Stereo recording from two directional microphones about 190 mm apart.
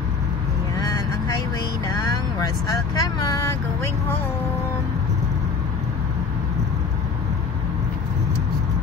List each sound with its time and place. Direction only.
0.7 s vehicle: 20° left (ahead or behind)
1.9 s speech: 20° left (ahead or behind)